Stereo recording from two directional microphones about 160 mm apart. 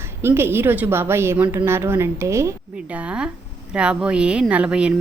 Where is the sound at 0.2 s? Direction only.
15° right (ahead or behind).